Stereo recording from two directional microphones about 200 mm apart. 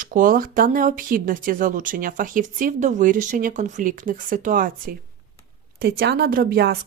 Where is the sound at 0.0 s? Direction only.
45° right (ahead or behind).